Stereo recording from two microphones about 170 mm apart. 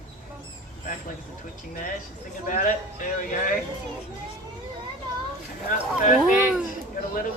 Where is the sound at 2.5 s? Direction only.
50° left (ahead or behind).